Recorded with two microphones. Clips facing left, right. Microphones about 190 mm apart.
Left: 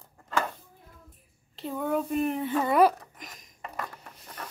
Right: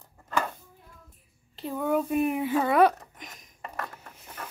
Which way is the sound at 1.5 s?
Centre (ahead or behind).